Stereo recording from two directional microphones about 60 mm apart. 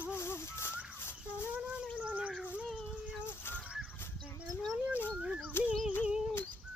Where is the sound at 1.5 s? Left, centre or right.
Right.